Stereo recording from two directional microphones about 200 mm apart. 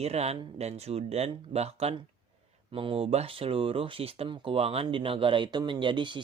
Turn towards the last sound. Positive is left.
turn(degrees=-25)  # may be behind; listen again after turning